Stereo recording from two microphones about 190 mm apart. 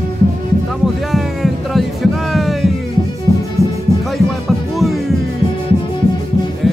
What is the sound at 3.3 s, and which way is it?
Music, 25° left (ahead or behind).